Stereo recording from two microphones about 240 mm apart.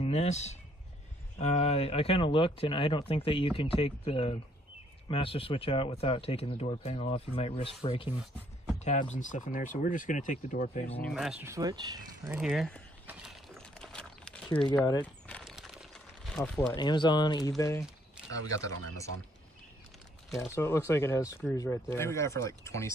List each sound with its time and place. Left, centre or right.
0.0 s speech: left
8.7 s a sound: left
9.1 s speech: left
11.0 s speech: centre
12.3 s speech: centre
13.0 s a sound: centre
14.9 s crumpling: centre
16.3 s speech: centre
16.7 s speech: centre
20.2 s speech: centre